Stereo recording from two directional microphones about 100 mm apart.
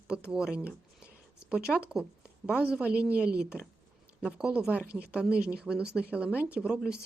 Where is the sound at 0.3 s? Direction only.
10° right (ahead or behind).